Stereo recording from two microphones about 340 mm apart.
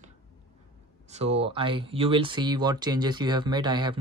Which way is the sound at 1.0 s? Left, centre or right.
Centre.